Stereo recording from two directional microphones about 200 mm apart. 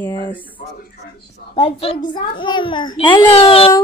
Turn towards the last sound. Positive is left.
turn(degrees=30)  # may be behind; listen again after turning